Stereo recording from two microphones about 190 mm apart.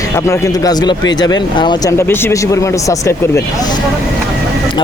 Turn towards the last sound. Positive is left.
turn(degrees=15)  # may be behind; listen again after turning